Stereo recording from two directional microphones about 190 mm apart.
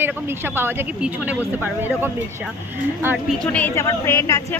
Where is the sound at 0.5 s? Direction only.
10° right (ahead or behind).